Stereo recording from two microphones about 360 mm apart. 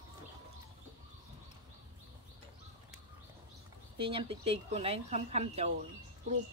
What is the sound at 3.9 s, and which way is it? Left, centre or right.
Speech, centre.